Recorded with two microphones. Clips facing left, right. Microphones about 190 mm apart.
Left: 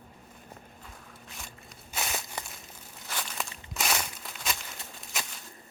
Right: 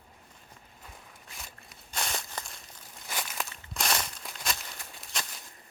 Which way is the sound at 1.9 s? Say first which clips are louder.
Left 1 dB; 5° left (ahead or behind).